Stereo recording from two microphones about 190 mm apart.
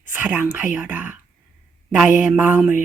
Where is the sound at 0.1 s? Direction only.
10° right (ahead or behind).